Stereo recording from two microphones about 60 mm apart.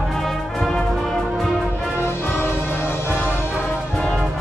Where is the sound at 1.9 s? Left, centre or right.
Left.